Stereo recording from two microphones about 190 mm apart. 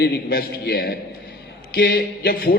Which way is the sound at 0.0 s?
55° left (ahead or behind).